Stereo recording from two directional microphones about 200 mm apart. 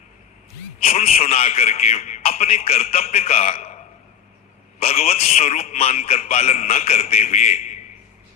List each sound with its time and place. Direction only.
0.8 s a man's voice: 30° left (ahead or behind)